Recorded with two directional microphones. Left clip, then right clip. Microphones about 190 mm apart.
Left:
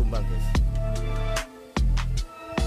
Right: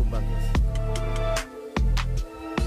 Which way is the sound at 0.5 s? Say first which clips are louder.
Right 1 dB; centre (ahead or behind).